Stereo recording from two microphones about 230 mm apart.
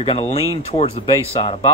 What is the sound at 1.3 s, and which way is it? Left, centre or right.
Speech, left.